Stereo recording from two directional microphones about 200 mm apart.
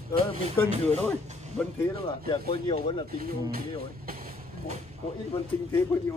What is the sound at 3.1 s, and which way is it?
Speech, 45° right (ahead or behind).